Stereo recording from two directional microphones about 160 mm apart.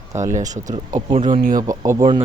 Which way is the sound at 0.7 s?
50° right (ahead or behind).